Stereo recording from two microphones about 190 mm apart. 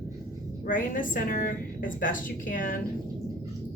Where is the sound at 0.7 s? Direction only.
45° left (ahead or behind).